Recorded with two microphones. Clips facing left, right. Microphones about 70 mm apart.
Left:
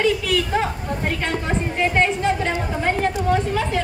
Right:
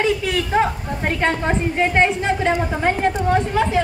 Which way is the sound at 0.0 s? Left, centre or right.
Right.